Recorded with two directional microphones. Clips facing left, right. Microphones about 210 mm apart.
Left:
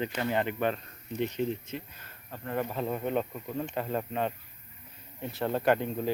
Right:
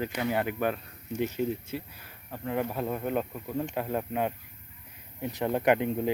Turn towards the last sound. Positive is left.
turn(degrees=-15)  # may be behind; listen again after turning